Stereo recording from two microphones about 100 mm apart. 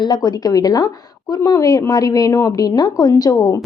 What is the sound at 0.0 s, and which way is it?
A woman's voice, 45° left (ahead or behind).